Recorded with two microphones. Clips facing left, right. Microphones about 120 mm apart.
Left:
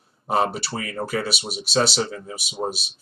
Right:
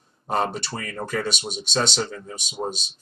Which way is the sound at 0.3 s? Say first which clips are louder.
Left 2 dB; 5° left (ahead or behind).